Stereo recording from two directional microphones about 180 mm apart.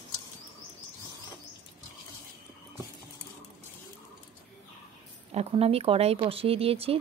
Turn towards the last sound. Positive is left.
turn(degrees=-35)  # may be behind; listen again after turning